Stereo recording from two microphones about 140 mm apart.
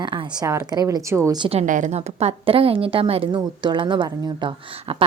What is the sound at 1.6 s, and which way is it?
A woman's voice, 65° right (ahead or behind).